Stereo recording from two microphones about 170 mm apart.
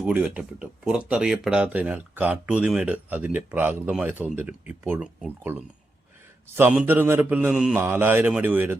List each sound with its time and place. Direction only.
0.0 s speech: 5° right (ahead or behind)